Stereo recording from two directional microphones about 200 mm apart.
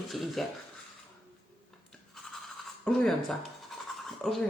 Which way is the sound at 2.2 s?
Centre (ahead or behind).